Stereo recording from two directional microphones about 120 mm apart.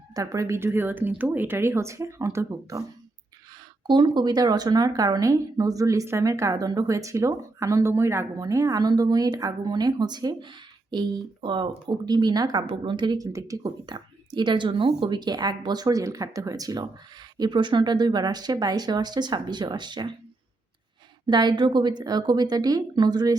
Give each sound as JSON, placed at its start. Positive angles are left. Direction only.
{"t": 0.1, "sound": "speech", "side_deg": -25}
{"t": 3.8, "sound": "speech", "side_deg": -40}
{"t": 21.2, "sound": "speech", "side_deg": -40}